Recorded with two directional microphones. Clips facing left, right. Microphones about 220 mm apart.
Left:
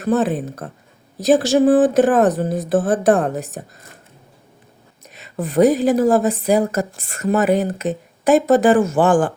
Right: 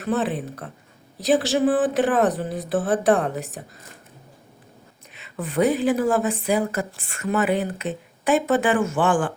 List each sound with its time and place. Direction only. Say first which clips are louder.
0.0 s speech: left 6 dB; 45° left (ahead or behind)
5.1 s a woman's voice: left 6 dB; 40° left (ahead or behind)